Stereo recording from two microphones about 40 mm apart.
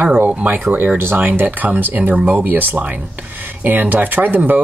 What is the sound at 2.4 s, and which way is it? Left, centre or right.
Speech, right.